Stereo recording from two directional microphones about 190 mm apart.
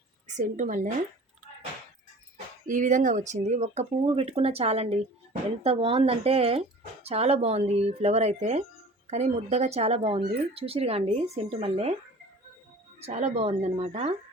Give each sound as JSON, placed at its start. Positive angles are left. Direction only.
{"t": 0.3, "sound": "speech", "side_deg": -40}
{"t": 2.6, "sound": "speech", "side_deg": -40}
{"t": 13.0, "sound": "speech", "side_deg": -35}